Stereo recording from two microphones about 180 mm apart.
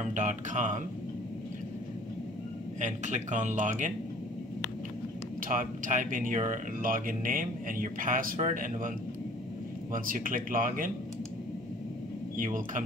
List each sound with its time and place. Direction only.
0.0 s speech: 40° right (ahead or behind)
2.8 s speech: 45° right (ahead or behind)
5.5 s speech: 45° right (ahead or behind)
9.9 s speech: 50° right (ahead or behind)
12.4 s speech: 50° right (ahead or behind)